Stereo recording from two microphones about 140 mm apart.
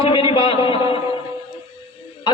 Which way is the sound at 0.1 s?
40° left (ahead or behind).